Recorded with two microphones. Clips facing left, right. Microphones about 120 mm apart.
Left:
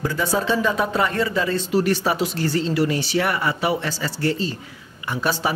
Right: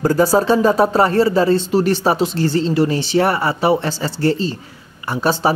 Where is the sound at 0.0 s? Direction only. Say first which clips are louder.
Right 8 dB; 40° right (ahead or behind).